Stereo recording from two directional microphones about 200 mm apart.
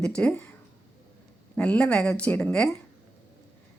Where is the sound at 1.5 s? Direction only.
5° left (ahead or behind).